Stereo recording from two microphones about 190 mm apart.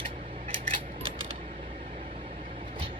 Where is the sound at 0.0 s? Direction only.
30° right (ahead or behind).